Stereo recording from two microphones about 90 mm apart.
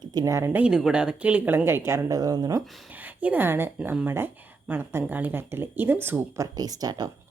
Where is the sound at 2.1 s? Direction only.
45° right (ahead or behind).